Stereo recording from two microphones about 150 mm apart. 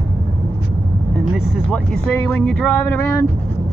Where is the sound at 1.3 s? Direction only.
Centre (ahead or behind).